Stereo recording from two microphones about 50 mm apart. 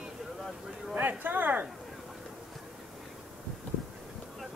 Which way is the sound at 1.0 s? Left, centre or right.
Right.